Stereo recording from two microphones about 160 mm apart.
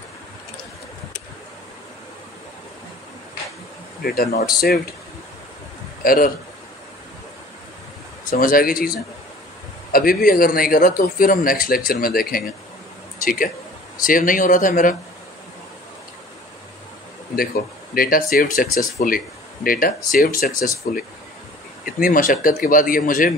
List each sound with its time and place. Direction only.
4.0 s speech: 70° left (ahead or behind)
6.0 s a man's voice: 60° left (ahead or behind)
8.3 s a man's voice: 60° left (ahead or behind)
9.9 s a man's voice: 65° left (ahead or behind)
17.9 s a man's voice: 65° left (ahead or behind)